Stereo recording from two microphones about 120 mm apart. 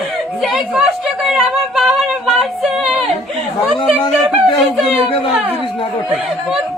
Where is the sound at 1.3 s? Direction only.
5° right (ahead or behind).